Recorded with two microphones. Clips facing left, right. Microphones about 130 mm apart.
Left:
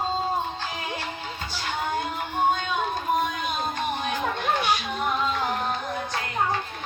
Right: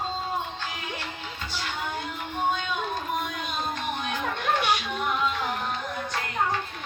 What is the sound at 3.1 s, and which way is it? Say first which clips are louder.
Music: left 5 dB; 45° left (ahead or behind).